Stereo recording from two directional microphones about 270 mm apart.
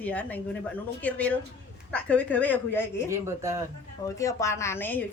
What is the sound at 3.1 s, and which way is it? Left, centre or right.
Speech, centre.